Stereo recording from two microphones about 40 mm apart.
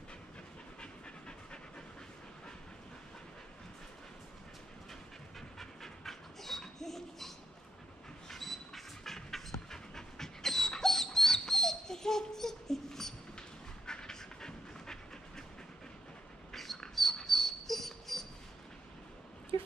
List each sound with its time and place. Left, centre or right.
0.7 s pant: left
5.6 s dog: centre
13.8 s pant: centre
16.5 s a sound: centre
16.9 s dog: centre